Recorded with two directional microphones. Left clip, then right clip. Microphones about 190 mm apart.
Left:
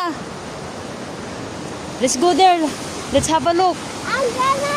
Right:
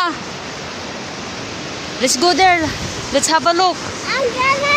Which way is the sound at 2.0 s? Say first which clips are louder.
Right 1 dB; 20° left (ahead or behind).